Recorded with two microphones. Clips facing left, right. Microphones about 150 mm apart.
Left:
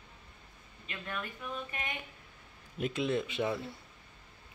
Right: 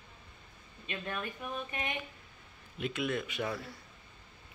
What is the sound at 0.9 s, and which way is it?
Speech, 20° right (ahead or behind).